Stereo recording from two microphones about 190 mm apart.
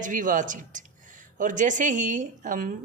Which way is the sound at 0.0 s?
45° right (ahead or behind).